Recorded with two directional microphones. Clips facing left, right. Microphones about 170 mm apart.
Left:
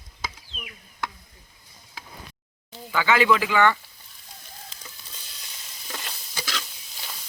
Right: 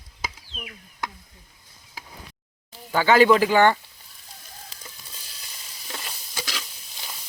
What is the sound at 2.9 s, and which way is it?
Speech, 40° right (ahead or behind).